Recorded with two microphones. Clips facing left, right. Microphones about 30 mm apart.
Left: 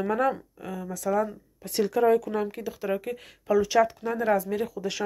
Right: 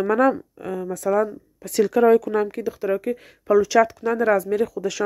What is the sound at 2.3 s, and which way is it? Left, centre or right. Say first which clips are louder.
Speech: right 7 dB; right.